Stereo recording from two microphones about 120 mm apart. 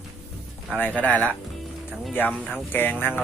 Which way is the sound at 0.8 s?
10° left (ahead or behind).